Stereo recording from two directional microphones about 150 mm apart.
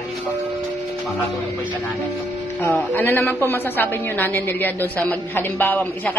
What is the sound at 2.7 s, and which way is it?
A woman's voice, 15° left (ahead or behind).